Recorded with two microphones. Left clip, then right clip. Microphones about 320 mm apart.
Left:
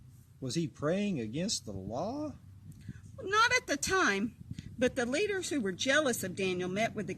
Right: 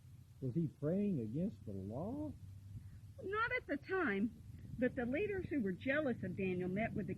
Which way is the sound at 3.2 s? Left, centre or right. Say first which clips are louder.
Left 11 dB; left.